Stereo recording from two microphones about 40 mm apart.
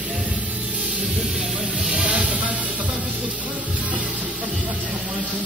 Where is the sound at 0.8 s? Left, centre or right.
Right.